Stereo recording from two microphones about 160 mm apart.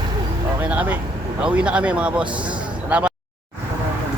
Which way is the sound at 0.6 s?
10° right (ahead or behind).